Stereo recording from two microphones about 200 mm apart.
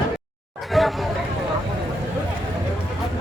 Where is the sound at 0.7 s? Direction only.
Centre (ahead or behind).